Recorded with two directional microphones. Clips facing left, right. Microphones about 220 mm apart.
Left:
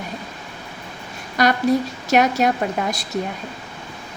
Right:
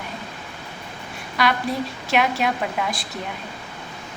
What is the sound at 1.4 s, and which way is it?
A woman's voice, 40° left (ahead or behind).